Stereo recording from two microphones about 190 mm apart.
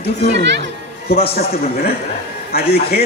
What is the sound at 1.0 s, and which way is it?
Speech, 55° left (ahead or behind).